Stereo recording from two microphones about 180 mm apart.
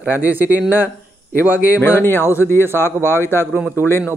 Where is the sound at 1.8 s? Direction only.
10° left (ahead or behind).